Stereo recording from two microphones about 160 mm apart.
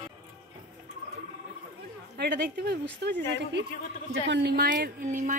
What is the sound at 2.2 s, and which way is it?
Speech, 90° right.